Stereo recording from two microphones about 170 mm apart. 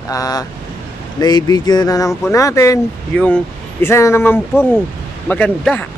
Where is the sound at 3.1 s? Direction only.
5° left (ahead or behind).